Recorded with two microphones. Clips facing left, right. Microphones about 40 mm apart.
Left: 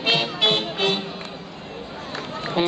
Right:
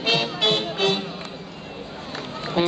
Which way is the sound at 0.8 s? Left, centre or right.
Left.